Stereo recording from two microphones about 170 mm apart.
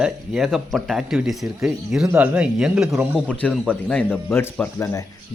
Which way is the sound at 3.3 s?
5° left (ahead or behind).